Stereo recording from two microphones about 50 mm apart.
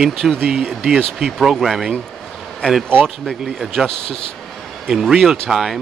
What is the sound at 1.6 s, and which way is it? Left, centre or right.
Speech, centre.